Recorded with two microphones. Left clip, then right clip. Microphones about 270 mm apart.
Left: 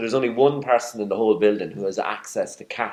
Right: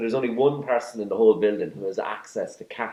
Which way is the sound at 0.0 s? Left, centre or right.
Left.